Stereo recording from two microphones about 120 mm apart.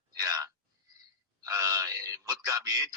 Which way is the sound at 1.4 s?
30° right (ahead or behind).